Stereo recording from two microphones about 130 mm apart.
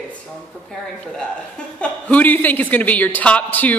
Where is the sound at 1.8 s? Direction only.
10° left (ahead or behind).